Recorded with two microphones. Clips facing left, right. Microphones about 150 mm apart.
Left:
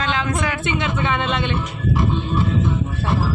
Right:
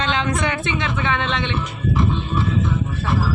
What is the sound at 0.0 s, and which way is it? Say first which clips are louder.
A woman's voice: right 1 dB; 5° left (ahead or behind).